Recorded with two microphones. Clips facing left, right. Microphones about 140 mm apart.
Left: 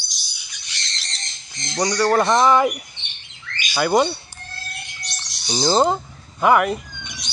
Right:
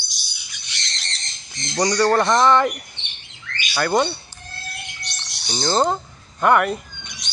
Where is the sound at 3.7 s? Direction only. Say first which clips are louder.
Left 2 dB; 10° left (ahead or behind).